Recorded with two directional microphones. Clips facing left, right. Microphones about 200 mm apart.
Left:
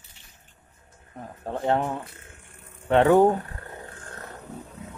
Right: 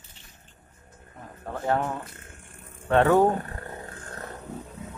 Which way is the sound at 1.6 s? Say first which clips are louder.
Left 2 dB; 20° left (ahead or behind).